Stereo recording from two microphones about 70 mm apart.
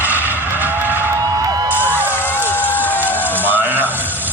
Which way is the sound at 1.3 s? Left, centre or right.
Right.